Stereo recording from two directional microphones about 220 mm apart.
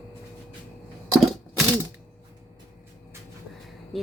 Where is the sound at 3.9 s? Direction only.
Centre (ahead or behind).